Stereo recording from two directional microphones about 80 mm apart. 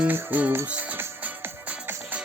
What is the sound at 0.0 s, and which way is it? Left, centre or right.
Music, right.